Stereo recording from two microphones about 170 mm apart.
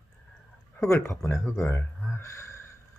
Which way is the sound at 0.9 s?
15° left (ahead or behind).